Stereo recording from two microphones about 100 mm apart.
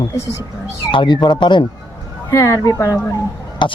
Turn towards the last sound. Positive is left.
turn(degrees=50)  # may be behind; listen again after turning